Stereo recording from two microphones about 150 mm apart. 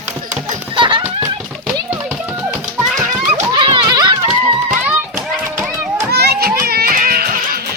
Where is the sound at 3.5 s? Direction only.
30° right (ahead or behind).